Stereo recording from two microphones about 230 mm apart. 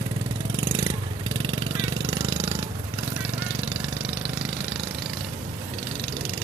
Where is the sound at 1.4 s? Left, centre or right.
Centre.